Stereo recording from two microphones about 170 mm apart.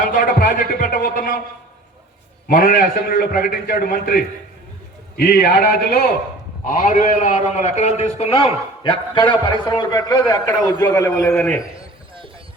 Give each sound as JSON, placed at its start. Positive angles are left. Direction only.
{"t": 0.1, "sound": "a man's voice", "side_deg": 55}
{"t": 2.5, "sound": "a man's voice", "side_deg": 55}
{"t": 6.7, "sound": "a man's voice", "side_deg": 55}